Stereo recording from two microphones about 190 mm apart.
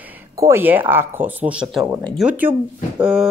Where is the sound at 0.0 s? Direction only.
10° right (ahead or behind).